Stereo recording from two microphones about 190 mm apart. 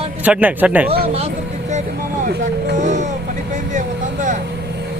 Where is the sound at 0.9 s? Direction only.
30° right (ahead or behind).